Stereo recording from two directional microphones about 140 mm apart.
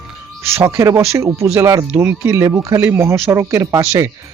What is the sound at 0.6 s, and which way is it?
Speech, 25° right (ahead or behind).